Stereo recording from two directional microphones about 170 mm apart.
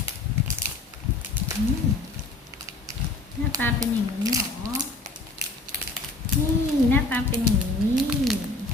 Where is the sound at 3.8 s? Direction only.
20° right (ahead or behind).